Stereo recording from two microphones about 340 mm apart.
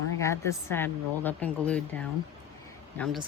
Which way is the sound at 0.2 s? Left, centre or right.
Centre.